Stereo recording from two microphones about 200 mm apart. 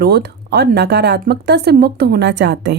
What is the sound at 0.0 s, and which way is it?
Speech, 55° right (ahead or behind).